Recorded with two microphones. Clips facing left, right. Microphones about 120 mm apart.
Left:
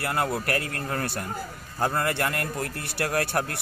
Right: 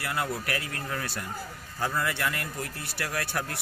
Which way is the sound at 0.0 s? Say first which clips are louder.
Left 4 dB; 50° left (ahead or behind).